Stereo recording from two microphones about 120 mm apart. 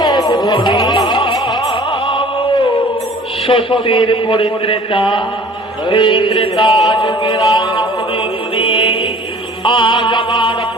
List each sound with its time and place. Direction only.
0.0 s music: 35° left (ahead or behind)
3.4 s a man's voice: 50° left (ahead or behind)
6.8 s music: 40° left (ahead or behind)